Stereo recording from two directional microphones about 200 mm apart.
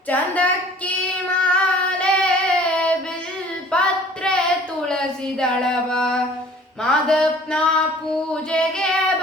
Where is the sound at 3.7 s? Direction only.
5° left (ahead or behind).